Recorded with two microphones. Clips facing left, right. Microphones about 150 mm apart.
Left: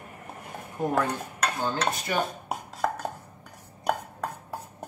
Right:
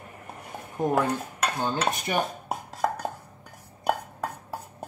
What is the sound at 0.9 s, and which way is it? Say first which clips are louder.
Dishes: right 2 dB; 15° right (ahead or behind).